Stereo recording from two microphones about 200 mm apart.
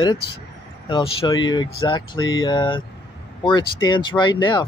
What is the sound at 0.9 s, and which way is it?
Speech, 20° left (ahead or behind).